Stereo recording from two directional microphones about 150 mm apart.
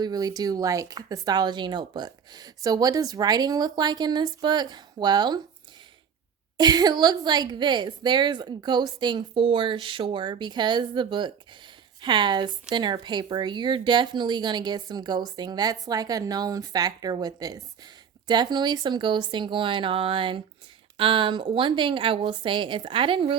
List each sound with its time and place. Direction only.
0.0 s speech: 25° right (ahead or behind)
6.6 s a woman's voice: 25° right (ahead or behind)